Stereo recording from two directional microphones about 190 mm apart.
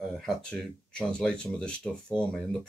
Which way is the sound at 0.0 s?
Centre (ahead or behind).